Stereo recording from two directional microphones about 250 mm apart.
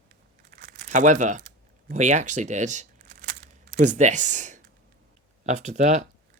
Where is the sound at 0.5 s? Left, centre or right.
Right.